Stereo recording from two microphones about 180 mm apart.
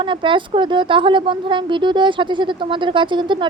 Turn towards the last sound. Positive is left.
turn(degrees=-25)  # may be behind; listen again after turning